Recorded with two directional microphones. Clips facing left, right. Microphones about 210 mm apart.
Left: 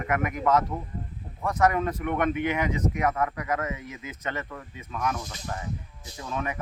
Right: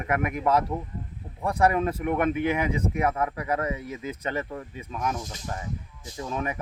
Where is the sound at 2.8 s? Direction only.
30° right (ahead or behind).